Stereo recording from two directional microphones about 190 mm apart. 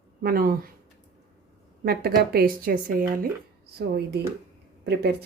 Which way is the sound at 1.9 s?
55° right (ahead or behind).